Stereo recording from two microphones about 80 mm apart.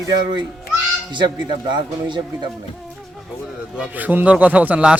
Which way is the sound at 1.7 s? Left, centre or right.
Right.